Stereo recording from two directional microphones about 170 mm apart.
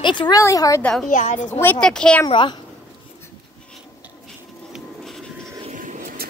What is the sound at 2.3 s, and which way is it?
Speech, 30° left (ahead or behind).